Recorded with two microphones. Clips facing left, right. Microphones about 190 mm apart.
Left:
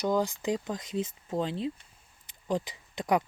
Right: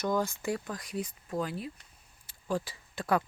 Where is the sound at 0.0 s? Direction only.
15° left (ahead or behind).